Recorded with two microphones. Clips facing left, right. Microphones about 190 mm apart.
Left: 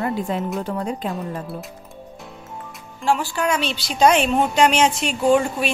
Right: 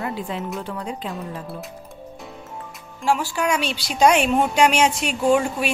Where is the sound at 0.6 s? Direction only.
45° left (ahead or behind).